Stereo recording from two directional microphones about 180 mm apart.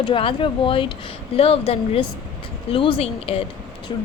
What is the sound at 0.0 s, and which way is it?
Speech, 30° left (ahead or behind).